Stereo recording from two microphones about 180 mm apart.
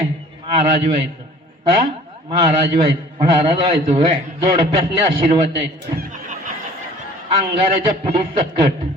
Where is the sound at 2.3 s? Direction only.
30° right (ahead or behind).